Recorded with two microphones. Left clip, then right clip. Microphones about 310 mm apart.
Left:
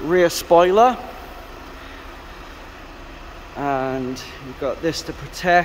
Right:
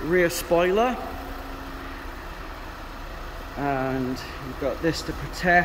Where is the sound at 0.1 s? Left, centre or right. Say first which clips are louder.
Left 7 dB; centre.